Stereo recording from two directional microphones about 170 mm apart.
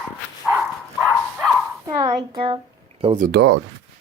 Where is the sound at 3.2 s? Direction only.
65° right (ahead or behind).